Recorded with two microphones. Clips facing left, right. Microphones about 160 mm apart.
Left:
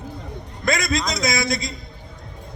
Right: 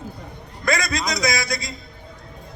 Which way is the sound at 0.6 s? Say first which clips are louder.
Left 1 dB; 20° left (ahead or behind).